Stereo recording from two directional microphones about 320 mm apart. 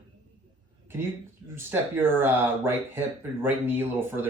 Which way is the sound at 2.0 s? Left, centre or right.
Centre.